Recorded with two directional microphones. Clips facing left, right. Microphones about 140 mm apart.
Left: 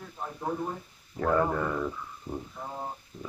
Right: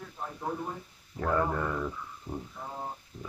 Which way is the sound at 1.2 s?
10° left (ahead or behind).